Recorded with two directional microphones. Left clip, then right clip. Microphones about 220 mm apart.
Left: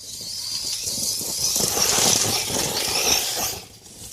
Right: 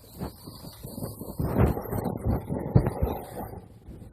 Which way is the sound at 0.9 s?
20° left (ahead or behind).